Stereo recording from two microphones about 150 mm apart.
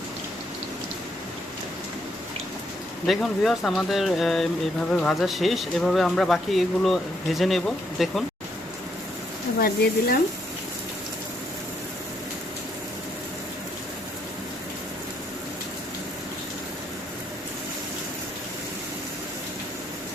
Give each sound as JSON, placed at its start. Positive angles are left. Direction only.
{"t": 3.1, "sound": "speech", "side_deg": 0}
{"t": 9.6, "sound": "speech", "side_deg": 85}